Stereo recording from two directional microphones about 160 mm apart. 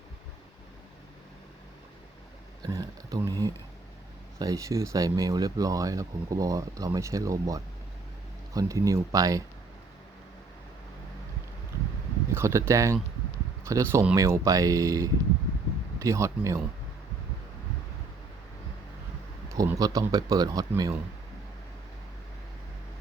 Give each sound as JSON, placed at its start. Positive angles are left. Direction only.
{"t": 2.6, "sound": "speech", "side_deg": -20}
{"t": 12.3, "sound": "speech", "side_deg": -15}
{"t": 19.5, "sound": "speech", "side_deg": -20}